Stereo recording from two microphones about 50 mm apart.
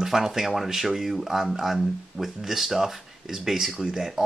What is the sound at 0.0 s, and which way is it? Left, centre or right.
Speech, centre.